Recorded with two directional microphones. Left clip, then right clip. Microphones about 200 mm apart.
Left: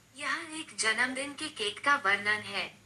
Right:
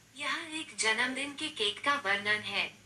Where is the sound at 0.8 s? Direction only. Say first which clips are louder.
Left 1 dB; 20° left (ahead or behind).